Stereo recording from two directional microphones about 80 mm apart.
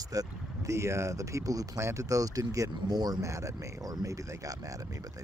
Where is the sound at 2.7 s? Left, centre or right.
Right.